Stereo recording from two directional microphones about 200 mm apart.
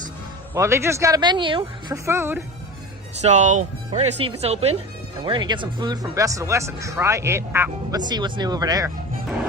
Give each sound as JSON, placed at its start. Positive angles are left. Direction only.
{"t": 0.5, "sound": "speech", "side_deg": -15}
{"t": 2.0, "sound": "speech", "side_deg": -10}
{"t": 3.2, "sound": "speech", "side_deg": -35}